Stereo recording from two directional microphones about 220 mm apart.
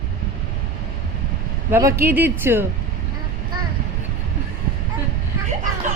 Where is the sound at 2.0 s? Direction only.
10° right (ahead or behind).